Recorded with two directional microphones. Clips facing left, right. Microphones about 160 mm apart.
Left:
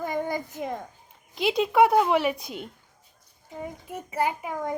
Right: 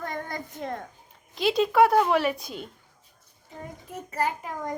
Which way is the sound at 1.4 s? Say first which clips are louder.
Even; 20° left (ahead or behind).